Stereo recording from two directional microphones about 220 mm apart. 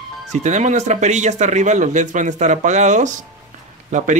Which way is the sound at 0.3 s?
30° right (ahead or behind).